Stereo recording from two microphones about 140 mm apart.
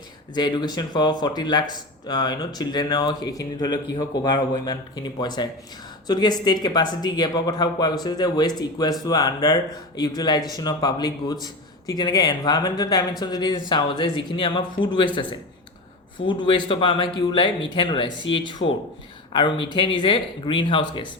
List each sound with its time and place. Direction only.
0.3 s speech: 30° left (ahead or behind)